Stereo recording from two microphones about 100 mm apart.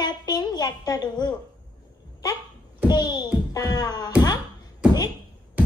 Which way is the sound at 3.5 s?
40° left (ahead or behind).